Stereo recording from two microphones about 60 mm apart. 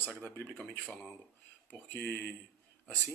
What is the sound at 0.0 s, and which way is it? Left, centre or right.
Speech, left.